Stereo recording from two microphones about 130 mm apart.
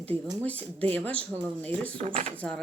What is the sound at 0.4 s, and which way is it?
Speech, 10° left (ahead or behind).